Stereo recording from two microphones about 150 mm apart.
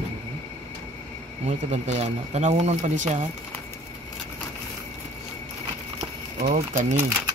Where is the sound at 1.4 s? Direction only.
50° right (ahead or behind).